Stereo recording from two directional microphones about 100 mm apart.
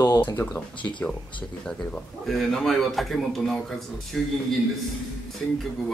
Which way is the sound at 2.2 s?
Centre (ahead or behind).